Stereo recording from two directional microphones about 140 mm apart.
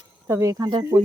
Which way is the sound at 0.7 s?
35° right (ahead or behind).